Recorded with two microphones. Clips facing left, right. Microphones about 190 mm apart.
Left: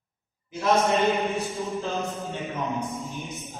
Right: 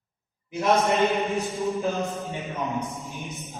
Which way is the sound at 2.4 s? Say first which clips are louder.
Even; centre (ahead or behind).